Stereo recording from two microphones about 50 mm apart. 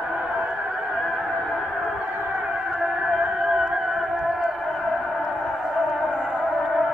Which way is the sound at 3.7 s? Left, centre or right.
Centre.